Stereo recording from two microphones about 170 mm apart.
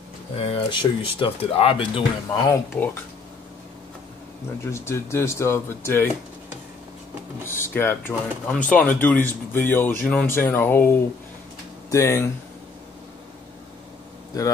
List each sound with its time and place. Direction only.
0.4 s speech: 30° left (ahead or behind)
2.7 s speech: 15° left (ahead or behind)
4.6 s speech: 15° left (ahead or behind)
7.4 s speech: 15° left (ahead or behind)